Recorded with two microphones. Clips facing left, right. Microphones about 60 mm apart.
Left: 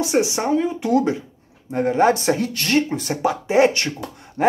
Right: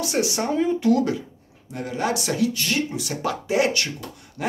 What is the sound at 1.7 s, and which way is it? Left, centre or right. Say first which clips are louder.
Speech: left 9 dB; left.